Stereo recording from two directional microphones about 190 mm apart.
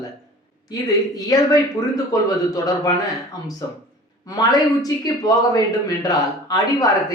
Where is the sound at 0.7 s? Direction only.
20° left (ahead or behind).